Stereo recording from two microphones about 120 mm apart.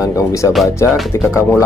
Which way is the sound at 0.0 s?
25° left (ahead or behind).